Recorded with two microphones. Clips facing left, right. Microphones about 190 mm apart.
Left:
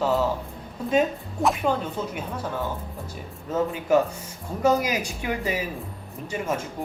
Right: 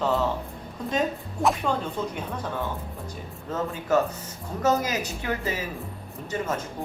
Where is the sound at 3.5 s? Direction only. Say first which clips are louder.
Left 3 dB; 10° left (ahead or behind).